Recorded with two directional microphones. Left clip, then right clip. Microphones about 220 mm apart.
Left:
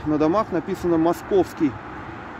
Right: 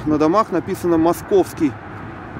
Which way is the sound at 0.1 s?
5° right (ahead or behind).